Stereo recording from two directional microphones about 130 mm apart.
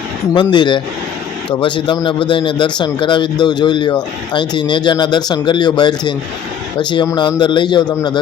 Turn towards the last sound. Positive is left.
turn(degrees=35)  # may be behind; listen again after turning